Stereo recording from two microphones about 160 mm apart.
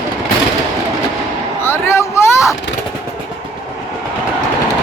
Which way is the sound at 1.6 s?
15° left (ahead or behind).